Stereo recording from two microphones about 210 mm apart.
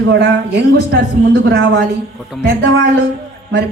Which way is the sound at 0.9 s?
55° right (ahead or behind).